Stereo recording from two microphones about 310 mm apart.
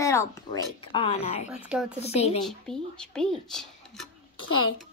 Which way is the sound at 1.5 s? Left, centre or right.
Centre.